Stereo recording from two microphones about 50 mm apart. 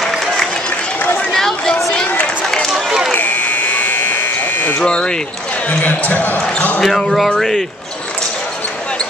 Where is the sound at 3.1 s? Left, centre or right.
Left.